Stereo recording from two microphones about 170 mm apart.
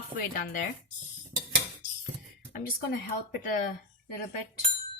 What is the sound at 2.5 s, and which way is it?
Speech, 55° left (ahead or behind).